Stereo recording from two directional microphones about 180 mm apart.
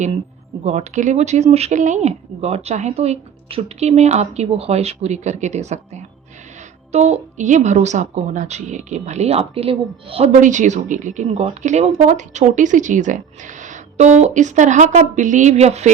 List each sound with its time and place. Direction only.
0.6 s speech: 40° right (ahead or behind)
10.4 s speech: 45° right (ahead or behind)